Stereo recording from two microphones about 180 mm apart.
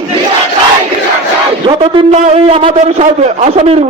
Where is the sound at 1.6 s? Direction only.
35° right (ahead or behind).